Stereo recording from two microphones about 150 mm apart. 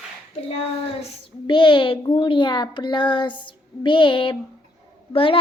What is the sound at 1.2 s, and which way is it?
A child's voice, 30° left (ahead or behind).